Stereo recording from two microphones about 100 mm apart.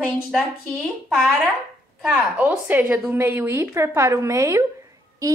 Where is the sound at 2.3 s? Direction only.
15° right (ahead or behind).